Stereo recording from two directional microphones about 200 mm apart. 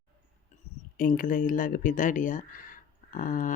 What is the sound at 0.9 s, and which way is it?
Speech, 45° left (ahead or behind).